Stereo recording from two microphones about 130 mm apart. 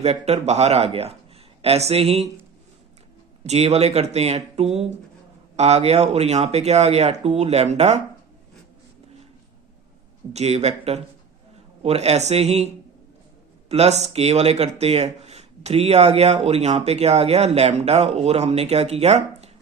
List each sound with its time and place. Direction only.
0.0 s speech: 55° right (ahead or behind)
3.4 s speech: 55° right (ahead or behind)
10.3 s speech: 55° right (ahead or behind)